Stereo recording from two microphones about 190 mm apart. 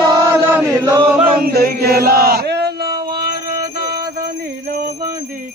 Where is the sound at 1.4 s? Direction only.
55° right (ahead or behind).